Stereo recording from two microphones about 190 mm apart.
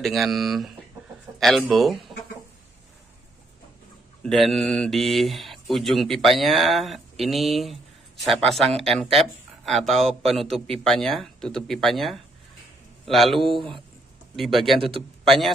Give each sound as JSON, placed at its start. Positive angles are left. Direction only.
{"t": 0.0, "sound": "speech", "side_deg": 0}
{"t": 4.2, "sound": "speech", "side_deg": 0}
{"t": 14.8, "sound": "speech", "side_deg": -30}
{"t": 15.2, "sound": "speech", "side_deg": 0}